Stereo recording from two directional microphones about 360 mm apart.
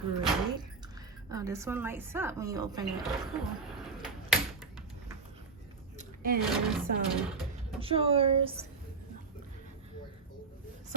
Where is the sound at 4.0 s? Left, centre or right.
Centre.